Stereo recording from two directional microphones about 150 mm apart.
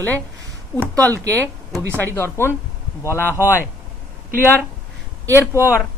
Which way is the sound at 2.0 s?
15° left (ahead or behind).